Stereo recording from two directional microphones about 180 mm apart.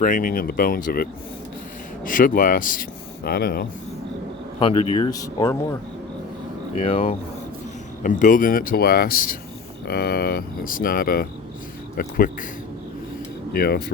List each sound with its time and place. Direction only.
0.0 s speech: 50° left (ahead or behind)
2.0 s speech: 50° left (ahead or behind)
3.2 s speech: 60° left (ahead or behind)
4.6 s speech: 30° left (ahead or behind)
5.0 s speech: 20° left (ahead or behind)
6.7 s speech: 35° left (ahead or behind)
8.0 s speech: 45° left (ahead or behind)
13.5 s speech: 60° left (ahead or behind)